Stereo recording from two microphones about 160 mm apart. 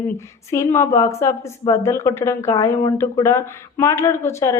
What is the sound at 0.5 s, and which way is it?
Speech, 15° left (ahead or behind).